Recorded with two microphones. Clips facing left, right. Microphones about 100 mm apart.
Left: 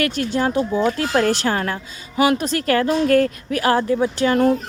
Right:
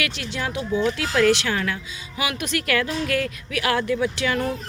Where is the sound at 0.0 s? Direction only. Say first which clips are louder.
Left 8 dB; 45° left (ahead or behind).